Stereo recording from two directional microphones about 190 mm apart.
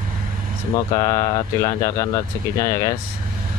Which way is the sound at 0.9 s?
15° left (ahead or behind).